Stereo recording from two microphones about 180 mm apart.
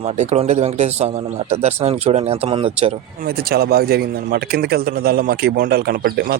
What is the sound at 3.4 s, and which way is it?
A man's voice, 60° right (ahead or behind).